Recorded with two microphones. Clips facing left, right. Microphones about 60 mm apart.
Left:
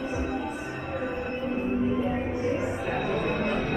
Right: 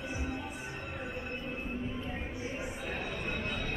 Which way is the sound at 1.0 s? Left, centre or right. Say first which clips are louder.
Left 10 dB; left.